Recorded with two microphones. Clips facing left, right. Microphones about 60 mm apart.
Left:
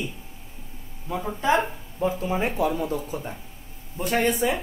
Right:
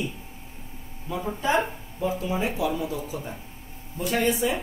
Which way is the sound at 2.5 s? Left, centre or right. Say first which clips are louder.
Left 2 dB; left.